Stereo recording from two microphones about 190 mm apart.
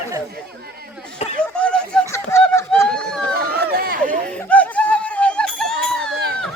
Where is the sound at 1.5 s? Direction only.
5° left (ahead or behind).